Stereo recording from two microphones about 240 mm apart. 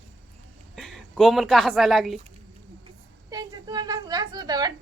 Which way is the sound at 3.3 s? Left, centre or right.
Centre.